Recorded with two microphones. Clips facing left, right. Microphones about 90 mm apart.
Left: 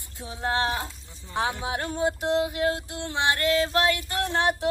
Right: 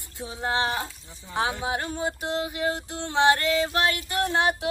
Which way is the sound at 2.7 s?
30° right (ahead or behind).